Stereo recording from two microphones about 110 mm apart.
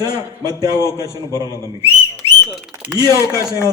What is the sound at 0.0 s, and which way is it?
A man's voice, 35° right (ahead or behind).